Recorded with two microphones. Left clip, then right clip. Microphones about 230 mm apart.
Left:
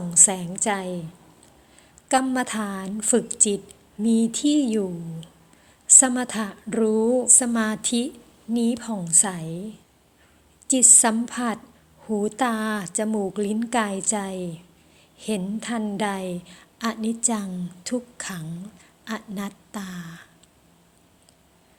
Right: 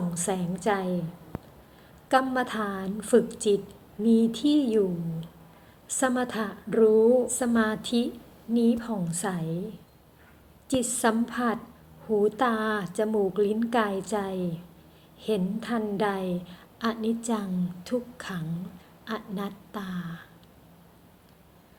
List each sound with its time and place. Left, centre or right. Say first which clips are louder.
0.1 s a woman's voice: left 12 dB; left
2.0 s a woman's voice: left 2 dB; left
10.7 s a woman's voice: left 6 dB; left